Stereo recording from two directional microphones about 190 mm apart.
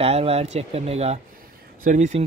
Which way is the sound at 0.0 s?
30° right (ahead or behind).